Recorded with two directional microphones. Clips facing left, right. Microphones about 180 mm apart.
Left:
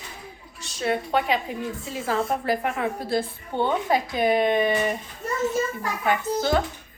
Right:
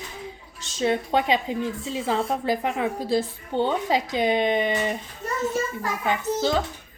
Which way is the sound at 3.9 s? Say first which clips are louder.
Left 1 dB; 20° right (ahead or behind).